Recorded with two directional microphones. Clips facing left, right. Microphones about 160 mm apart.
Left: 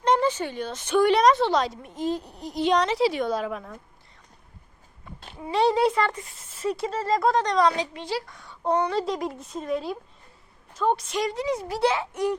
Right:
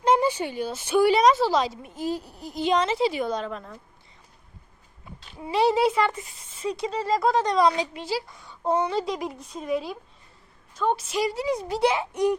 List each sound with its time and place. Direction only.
0.0 s a woman's voice: 10° right (ahead or behind)
5.4 s a woman's voice: 5° right (ahead or behind)